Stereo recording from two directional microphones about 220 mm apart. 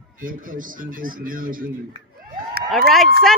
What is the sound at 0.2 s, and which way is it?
Speech, 40° right (ahead or behind).